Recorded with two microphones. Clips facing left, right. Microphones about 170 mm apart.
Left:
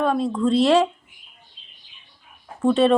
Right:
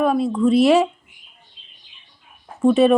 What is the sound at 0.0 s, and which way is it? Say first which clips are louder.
Speech: right 3 dB; 10° right (ahead or behind).